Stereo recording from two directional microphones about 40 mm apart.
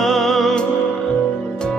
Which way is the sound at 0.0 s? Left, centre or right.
Centre.